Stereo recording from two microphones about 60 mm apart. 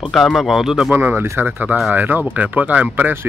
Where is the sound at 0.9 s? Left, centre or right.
Right.